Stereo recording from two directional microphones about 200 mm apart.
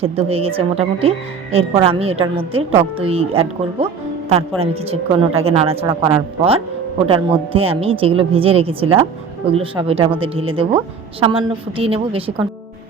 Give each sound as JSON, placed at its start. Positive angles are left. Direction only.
{"t": 0.0, "sound": "a woman's voice", "side_deg": -30}